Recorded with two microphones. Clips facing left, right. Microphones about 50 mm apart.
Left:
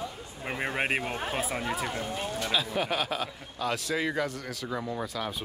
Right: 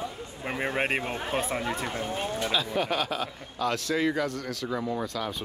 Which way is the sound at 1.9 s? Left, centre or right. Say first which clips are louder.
Right 2 dB; right.